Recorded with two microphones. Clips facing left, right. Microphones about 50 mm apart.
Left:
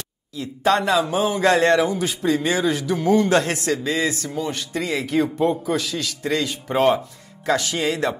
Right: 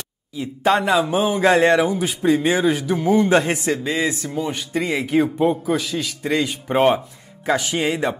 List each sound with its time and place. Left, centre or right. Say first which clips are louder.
0.3 s speech: right 1 dB; centre